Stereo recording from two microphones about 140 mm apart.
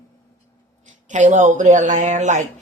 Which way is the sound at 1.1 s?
60° right (ahead or behind).